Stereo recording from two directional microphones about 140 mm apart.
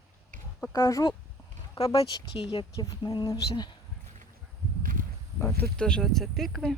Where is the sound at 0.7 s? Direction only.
25° left (ahead or behind).